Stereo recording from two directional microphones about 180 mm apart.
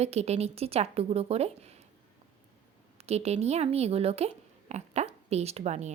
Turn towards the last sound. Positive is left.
turn(degrees=-40)  # may be behind; listen again after turning